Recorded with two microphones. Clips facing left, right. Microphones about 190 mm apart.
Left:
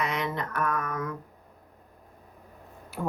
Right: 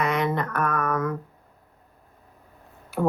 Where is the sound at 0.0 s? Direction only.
55° right (ahead or behind).